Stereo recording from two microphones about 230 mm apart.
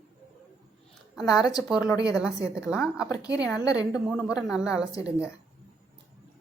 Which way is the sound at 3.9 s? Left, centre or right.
Centre.